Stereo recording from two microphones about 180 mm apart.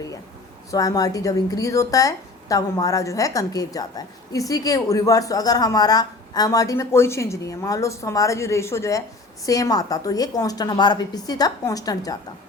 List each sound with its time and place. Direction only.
0.7 s speech: 20° left (ahead or behind)